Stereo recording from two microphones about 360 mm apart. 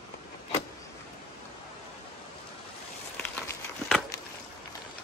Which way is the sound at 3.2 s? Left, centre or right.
Centre.